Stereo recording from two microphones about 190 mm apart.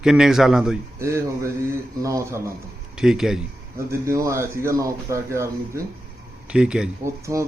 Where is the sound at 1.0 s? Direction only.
15° right (ahead or behind).